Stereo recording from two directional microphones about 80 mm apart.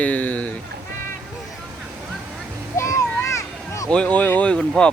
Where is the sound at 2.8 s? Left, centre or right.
Left.